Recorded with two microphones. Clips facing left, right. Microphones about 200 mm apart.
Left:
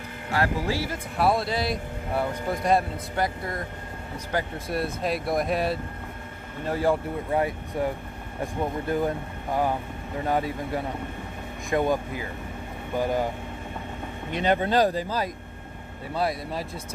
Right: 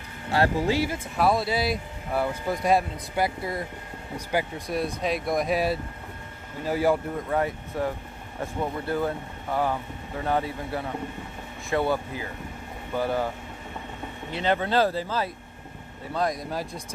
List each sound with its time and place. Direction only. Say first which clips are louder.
0.3 s speech: right 3 dB; 25° right (ahead or behind)
1.1 s speech: even; centre (ahead or behind)
4.6 s speech: even; centre (ahead or behind)
7.2 s speech: left 1 dB; 10° left (ahead or behind)
14.3 s speech: left 1 dB; 15° left (ahead or behind)